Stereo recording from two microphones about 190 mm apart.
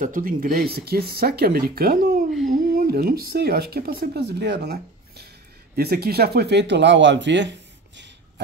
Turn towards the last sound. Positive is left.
turn(degrees=-70)  # may be behind; listen again after turning